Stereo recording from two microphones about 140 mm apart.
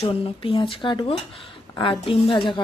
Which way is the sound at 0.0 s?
40° left (ahead or behind).